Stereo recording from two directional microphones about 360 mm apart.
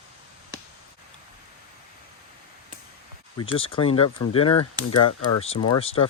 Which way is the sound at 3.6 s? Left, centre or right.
Centre.